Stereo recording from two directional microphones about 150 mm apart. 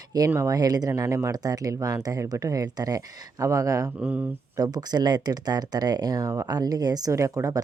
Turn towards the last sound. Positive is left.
turn(degrees=-20)  # may be behind; listen again after turning